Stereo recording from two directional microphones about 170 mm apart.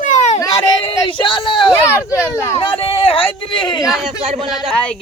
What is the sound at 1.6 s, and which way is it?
Speech, 10° left (ahead or behind).